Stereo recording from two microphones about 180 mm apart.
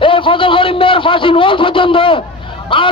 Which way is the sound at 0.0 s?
30° left (ahead or behind).